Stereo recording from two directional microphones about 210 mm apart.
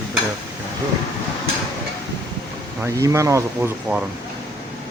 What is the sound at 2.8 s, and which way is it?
Speech, 15° right (ahead or behind).